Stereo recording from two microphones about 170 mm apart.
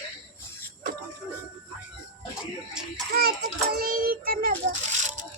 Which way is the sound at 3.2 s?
60° right (ahead or behind).